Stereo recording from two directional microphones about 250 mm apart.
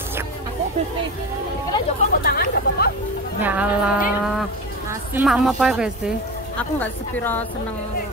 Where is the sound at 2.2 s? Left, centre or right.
Left.